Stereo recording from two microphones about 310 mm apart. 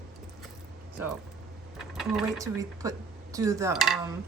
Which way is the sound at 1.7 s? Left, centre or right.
Centre.